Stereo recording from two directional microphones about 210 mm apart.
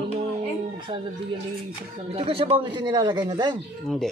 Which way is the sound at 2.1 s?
25° right (ahead or behind).